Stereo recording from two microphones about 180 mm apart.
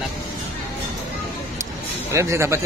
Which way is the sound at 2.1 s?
15° right (ahead or behind).